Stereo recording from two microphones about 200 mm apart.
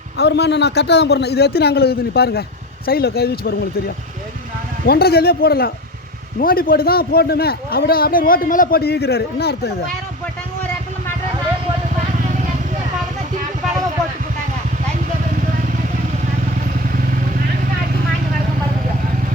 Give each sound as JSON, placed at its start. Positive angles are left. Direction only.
{"t": 0.2, "sound": "a man's voice", "side_deg": 55}